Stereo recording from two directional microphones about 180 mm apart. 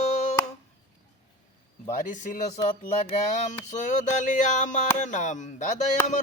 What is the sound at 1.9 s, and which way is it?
Speech, 45° left (ahead or behind).